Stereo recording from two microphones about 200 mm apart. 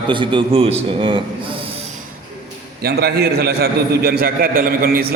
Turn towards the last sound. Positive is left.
turn(degrees=-50)  # may be behind; listen again after turning